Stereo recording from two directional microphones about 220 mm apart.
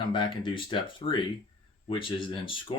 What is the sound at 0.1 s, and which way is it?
Speech, 20° left (ahead or behind).